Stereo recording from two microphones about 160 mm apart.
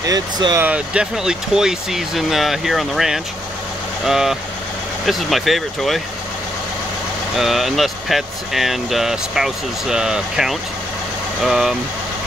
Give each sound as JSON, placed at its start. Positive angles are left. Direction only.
{"t": 0.0, "sound": "speech", "side_deg": -25}
{"t": 0.7, "sound": "speech", "side_deg": -5}
{"t": 7.3, "sound": "speech", "side_deg": 0}